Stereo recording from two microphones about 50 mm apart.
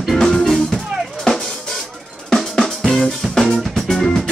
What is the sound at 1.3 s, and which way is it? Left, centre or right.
Drum, centre.